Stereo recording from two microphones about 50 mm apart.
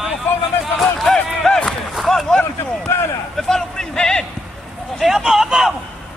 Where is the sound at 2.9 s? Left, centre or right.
Left.